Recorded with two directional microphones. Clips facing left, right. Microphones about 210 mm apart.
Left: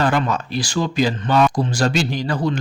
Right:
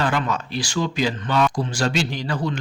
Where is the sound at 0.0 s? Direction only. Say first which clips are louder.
Left 4 dB; 40° left (ahead or behind).